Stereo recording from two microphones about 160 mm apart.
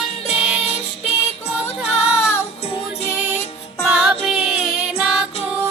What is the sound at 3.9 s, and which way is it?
Music, 5° right (ahead or behind).